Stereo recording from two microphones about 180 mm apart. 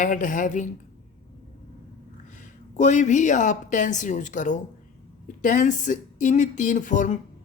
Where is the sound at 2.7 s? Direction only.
40° left (ahead or behind).